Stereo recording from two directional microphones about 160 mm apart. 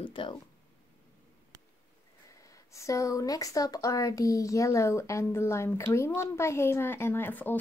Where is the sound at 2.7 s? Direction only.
20° left (ahead or behind).